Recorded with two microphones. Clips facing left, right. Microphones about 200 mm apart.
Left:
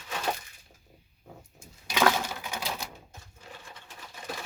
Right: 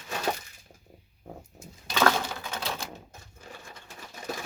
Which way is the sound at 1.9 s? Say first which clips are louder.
Even; 10° left (ahead or behind).